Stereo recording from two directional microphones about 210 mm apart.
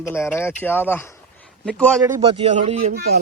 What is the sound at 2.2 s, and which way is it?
Speech, 30° right (ahead or behind).